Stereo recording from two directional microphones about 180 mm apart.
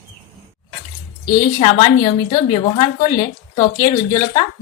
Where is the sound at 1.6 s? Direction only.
35° left (ahead or behind).